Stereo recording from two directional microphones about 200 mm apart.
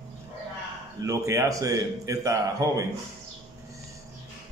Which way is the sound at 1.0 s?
15° right (ahead or behind).